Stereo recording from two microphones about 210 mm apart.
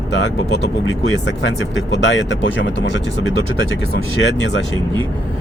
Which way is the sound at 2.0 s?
60° left (ahead or behind).